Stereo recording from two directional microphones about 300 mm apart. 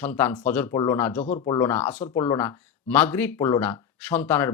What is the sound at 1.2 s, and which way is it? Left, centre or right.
Speech, left.